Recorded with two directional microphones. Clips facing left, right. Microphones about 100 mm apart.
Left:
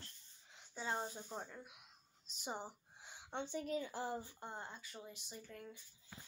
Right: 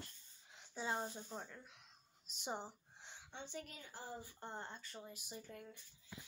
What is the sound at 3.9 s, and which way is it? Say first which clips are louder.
Speech: left 8 dB; 90° left.